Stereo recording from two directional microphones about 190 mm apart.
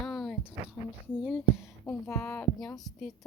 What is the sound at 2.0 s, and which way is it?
Speech, 15° left (ahead or behind).